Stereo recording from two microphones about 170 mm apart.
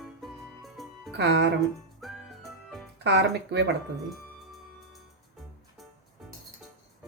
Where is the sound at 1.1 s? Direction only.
90° right.